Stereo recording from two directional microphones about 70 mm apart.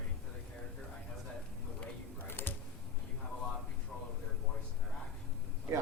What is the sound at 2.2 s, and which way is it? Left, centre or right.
Computer keyboard, left.